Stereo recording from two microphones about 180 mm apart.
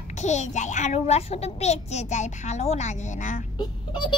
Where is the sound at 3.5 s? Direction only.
25° left (ahead or behind).